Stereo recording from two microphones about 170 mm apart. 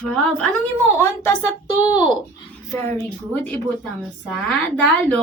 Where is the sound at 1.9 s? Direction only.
25° left (ahead or behind).